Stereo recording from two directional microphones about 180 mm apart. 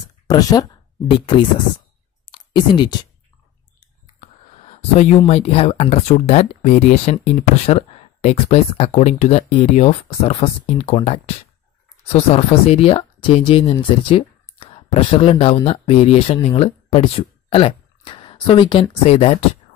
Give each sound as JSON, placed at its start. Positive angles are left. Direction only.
{"t": 0.3, "sound": "speech", "side_deg": 20}
{"t": 2.2, "sound": "clicking", "side_deg": 25}
{"t": 5.2, "sound": "speech", "side_deg": 35}